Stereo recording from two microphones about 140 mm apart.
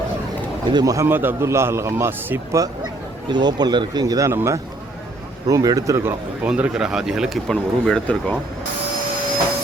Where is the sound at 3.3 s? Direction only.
30° right (ahead or behind).